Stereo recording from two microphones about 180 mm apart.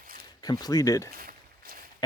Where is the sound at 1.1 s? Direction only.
55° right (ahead or behind).